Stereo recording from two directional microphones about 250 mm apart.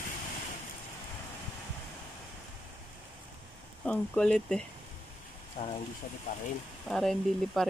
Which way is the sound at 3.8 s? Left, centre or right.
Centre.